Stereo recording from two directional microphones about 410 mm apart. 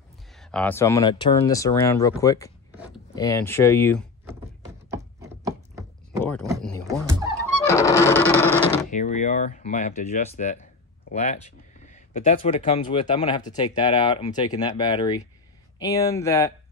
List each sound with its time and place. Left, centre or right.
0.4 s speech: centre
4.9 s a sound: centre
6.4 s music: centre
8.9 s speech: centre